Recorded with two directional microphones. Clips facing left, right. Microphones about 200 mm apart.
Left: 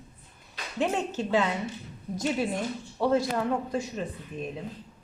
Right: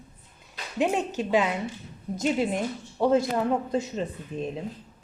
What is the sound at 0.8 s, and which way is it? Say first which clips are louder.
A woman's voice: right 2 dB; 15° right (ahead or behind).